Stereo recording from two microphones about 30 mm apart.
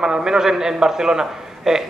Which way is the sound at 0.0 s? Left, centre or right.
Right.